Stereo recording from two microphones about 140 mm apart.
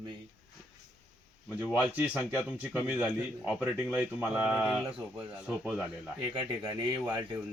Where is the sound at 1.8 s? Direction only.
10° right (ahead or behind).